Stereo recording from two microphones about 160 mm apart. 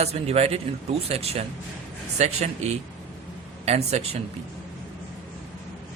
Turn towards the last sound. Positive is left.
turn(degrees=-40)  # may be behind; listen again after turning